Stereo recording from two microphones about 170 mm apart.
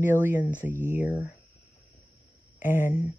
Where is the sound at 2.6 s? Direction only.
15° right (ahead or behind).